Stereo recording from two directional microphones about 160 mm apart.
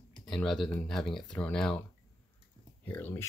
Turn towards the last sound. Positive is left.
turn(degrees=10)  # may be behind; listen again after turning